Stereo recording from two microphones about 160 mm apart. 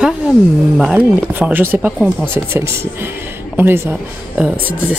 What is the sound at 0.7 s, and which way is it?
Speech, 5° right (ahead or behind).